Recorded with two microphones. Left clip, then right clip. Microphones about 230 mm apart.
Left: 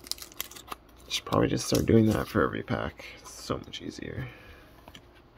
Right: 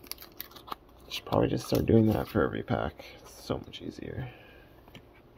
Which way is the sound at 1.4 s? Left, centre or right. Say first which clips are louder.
Left 1 dB; centre.